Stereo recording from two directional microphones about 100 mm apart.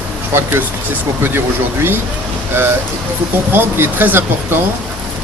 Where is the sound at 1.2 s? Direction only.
20° right (ahead or behind).